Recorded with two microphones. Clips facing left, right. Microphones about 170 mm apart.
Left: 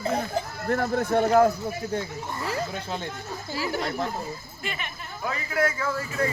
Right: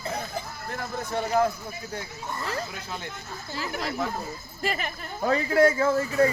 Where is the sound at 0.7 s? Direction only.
60° left (ahead or behind).